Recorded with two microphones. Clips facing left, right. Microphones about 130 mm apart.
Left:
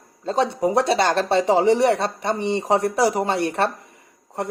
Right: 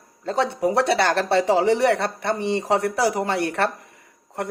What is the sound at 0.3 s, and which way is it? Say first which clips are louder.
A man's voice: left 1 dB; 20° left (ahead or behind).